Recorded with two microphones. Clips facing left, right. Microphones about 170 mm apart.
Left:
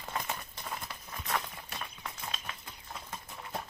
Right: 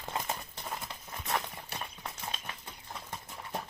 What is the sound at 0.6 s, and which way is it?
Clip-clop, 20° right (ahead or behind).